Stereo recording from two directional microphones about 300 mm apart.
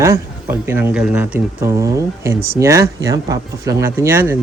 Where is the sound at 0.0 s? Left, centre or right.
Centre.